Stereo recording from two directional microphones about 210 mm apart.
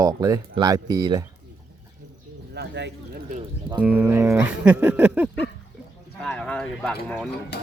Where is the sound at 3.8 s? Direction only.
10° right (ahead or behind).